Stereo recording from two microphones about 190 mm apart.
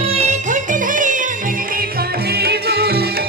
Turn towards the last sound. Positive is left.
turn(degrees=-55)  # may be behind; listen again after turning